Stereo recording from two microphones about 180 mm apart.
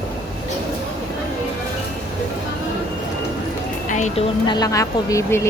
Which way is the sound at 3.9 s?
40° left (ahead or behind).